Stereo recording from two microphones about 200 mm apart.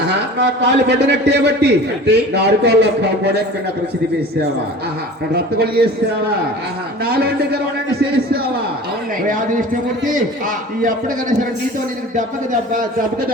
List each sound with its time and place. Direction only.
0.1 s a man's voice: 60° right (ahead or behind)
5.3 s speech: 50° right (ahead or behind)
7.0 s speech: 50° right (ahead or behind)
9.2 s a man's voice: 40° right (ahead or behind)
10.8 s a man's voice: 40° right (ahead or behind)